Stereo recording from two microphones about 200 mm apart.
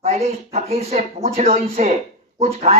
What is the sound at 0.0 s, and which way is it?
A man's voice, 30° right (ahead or behind).